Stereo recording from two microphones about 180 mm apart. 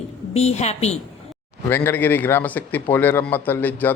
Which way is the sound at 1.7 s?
10° left (ahead or behind).